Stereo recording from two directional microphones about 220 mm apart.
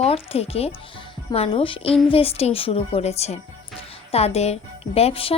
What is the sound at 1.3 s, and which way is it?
A woman's voice, 25° left (ahead or behind).